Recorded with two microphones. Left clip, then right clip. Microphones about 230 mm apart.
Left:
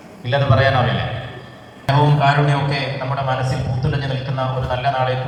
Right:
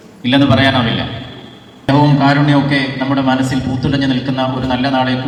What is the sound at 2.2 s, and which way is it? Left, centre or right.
A man's voice, right.